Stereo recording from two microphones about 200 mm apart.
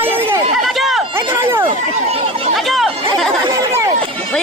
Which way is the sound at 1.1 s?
15° right (ahead or behind).